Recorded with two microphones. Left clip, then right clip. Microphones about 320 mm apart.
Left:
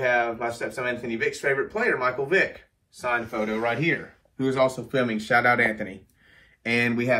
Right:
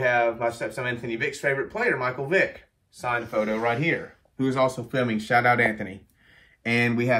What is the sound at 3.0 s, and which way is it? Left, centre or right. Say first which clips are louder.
Speech: right 1 dB; right.